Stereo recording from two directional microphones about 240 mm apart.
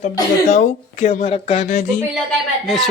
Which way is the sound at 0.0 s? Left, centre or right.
Left.